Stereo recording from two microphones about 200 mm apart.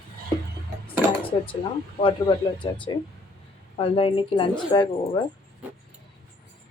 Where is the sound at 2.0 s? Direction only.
25° left (ahead or behind).